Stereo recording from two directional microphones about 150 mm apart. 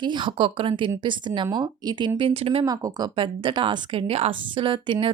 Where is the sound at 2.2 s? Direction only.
40° right (ahead or behind).